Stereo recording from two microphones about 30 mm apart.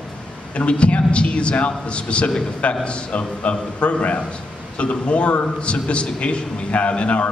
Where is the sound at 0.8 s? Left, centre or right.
Left.